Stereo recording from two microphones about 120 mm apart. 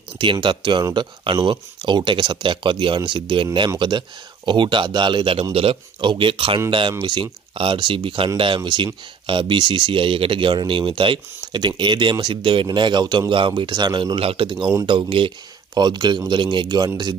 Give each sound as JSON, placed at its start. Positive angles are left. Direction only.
{"t": 0.2, "sound": "speech", "side_deg": -45}
{"t": 13.3, "sound": "speech", "side_deg": -45}